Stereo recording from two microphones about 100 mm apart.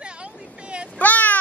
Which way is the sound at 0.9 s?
15° left (ahead or behind).